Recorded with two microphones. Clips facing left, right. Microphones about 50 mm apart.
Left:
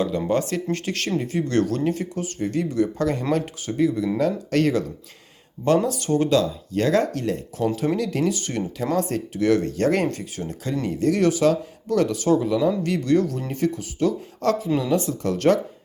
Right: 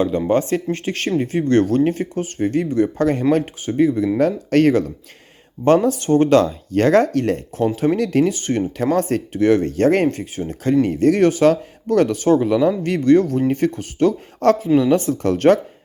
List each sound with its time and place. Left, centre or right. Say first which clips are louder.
0.3 s speech: right 5 dB; right